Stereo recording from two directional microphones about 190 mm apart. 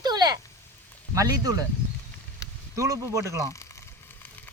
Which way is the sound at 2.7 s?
15° right (ahead or behind).